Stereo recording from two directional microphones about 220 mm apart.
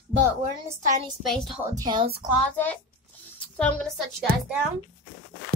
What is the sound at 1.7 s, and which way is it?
Speech, 20° right (ahead or behind).